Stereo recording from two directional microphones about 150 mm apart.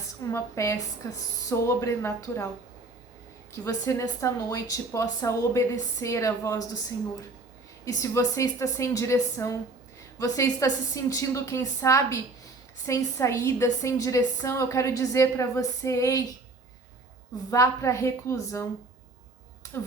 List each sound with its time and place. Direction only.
0.2 s a woman's voice: 20° left (ahead or behind)
3.5 s a woman's voice: 20° left (ahead or behind)
7.9 s a woman's voice: 20° left (ahead or behind)
17.5 s a woman's voice: 20° left (ahead or behind)